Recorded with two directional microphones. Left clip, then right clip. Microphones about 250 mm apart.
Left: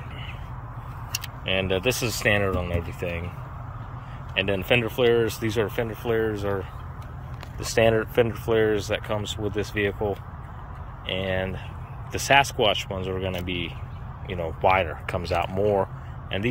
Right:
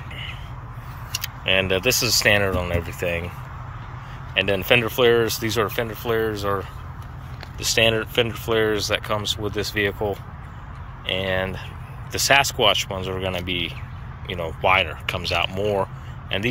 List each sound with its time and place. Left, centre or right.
1.2 s speech: centre
4.3 s speech: centre